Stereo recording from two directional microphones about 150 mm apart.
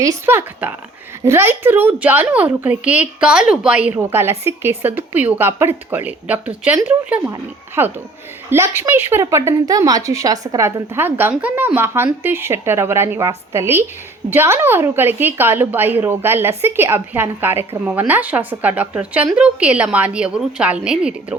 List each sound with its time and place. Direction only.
0.0 s a woman's voice: 20° right (ahead or behind)
7.8 s a woman's voice: 15° right (ahead or behind)